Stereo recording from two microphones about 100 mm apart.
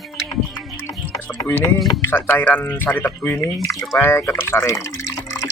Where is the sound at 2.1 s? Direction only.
15° left (ahead or behind).